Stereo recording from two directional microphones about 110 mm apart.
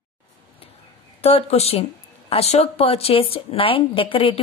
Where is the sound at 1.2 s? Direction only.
65° left (ahead or behind).